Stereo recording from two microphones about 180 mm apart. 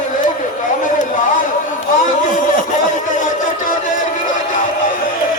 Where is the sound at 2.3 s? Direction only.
45° left (ahead or behind).